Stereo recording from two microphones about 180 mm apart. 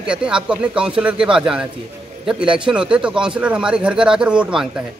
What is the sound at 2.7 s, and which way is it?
Speech, 5° right (ahead or behind).